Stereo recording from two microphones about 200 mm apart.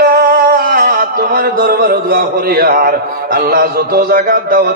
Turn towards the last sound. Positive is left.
turn(degrees=-45)  # may be behind; listen again after turning